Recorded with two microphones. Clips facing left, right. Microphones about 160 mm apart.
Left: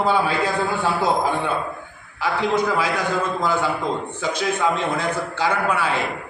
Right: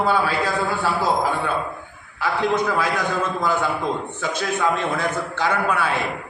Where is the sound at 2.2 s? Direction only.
10° left (ahead or behind).